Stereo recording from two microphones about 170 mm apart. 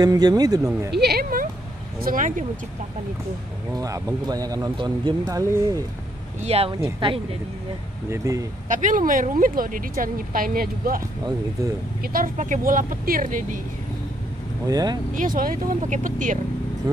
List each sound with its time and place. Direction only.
0.0 s speech: 20° right (ahead or behind)
0.9 s a sound: 70° right (ahead or behind)
2.0 s speech: 55° right (ahead or behind)
3.7 s speech: 20° right (ahead or behind)
6.4 s speech: 35° right (ahead or behind)
8.1 s speech: 20° right (ahead or behind)
8.6 s speech: 50° right (ahead or behind)
11.0 s speech: 20° right (ahead or behind)
12.0 s speech: 55° right (ahead or behind)
14.7 s speech: 20° right (ahead or behind)
15.1 s speech: 55° right (ahead or behind)
16.9 s speech: 20° right (ahead or behind)